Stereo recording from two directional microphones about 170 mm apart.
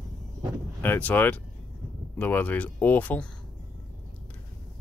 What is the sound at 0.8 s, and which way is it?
Speech, 10° left (ahead or behind).